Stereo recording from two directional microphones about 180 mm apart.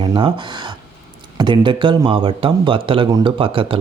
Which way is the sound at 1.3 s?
25° right (ahead or behind).